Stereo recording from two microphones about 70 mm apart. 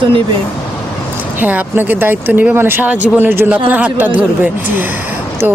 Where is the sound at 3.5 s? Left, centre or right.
Right.